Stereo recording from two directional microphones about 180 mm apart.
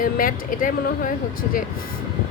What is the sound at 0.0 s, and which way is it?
Speech, 50° left (ahead or behind).